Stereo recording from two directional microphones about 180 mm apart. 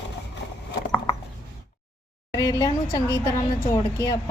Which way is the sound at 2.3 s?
20° left (ahead or behind).